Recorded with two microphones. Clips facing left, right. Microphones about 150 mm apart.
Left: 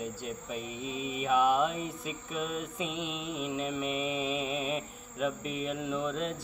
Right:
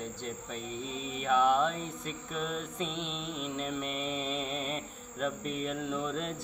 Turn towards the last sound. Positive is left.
turn(degrees=5)  # may be behind; listen again after turning